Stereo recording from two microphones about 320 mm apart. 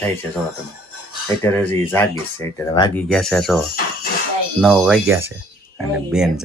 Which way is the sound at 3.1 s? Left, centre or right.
Centre.